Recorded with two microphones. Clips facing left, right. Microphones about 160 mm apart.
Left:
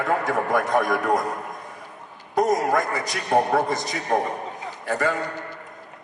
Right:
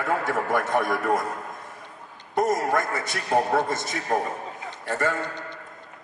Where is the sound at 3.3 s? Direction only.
20° left (ahead or behind).